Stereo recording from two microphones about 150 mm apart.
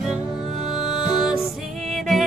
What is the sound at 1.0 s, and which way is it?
Music, 5° right (ahead or behind).